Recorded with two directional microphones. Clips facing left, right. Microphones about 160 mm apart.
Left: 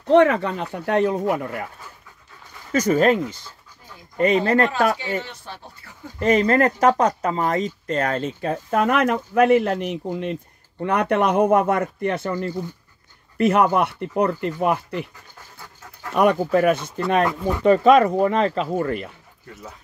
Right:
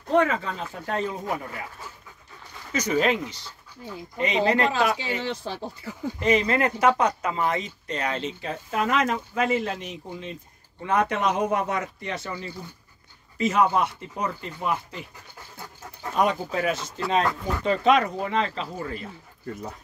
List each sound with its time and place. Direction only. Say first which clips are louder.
0.0 s speech: left 7 dB; 75° left (ahead or behind); by 1.7 s 55° left (ahead or behind)
2.7 s speech: left 6 dB; 50° left (ahead or behind)
5.2 s speech: right 7 dB; 90° right
6.1 s a man's voice: left 5 dB; 45° left (ahead or behind)
13.4 s a man's voice: left 4 dB; 60° left (ahead or behind)
16.1 s a man's voice: left 6 dB; 60° left (ahead or behind)
17.2 s speech: left 4 dB; 15° left (ahead or behind)
17.6 s speech: left 7 dB; 45° left (ahead or behind)